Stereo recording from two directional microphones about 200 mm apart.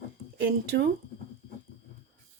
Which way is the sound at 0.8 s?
55° right (ahead or behind).